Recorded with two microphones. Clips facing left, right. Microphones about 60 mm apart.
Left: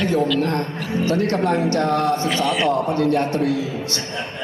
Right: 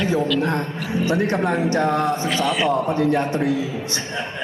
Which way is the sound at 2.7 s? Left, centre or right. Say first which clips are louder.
Even; right.